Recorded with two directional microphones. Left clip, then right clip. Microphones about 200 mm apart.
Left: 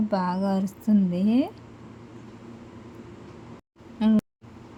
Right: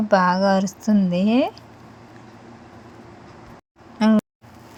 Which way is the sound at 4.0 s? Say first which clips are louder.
Right 6 dB; 15° right (ahead or behind).